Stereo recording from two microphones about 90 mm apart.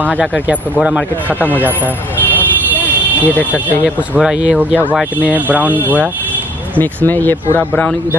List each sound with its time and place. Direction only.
0.0 s speech: 15° right (ahead or behind)
2.7 s a sound: 20° right (ahead or behind)
3.3 s speech: 20° left (ahead or behind)
3.8 s speech: 10° right (ahead or behind)
6.8 s speech: 20° left (ahead or behind)